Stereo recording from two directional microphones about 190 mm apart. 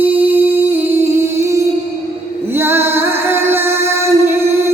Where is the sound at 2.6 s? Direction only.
10° right (ahead or behind).